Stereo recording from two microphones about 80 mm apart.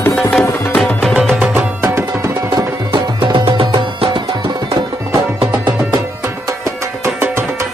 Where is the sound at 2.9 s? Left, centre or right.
Right.